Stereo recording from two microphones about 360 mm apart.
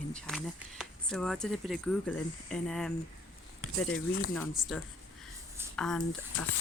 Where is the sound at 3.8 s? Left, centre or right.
Left.